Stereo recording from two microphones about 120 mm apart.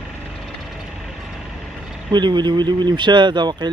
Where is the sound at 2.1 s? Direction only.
40° right (ahead or behind).